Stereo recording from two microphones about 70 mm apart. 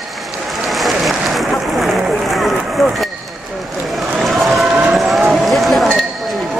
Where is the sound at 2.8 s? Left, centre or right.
Centre.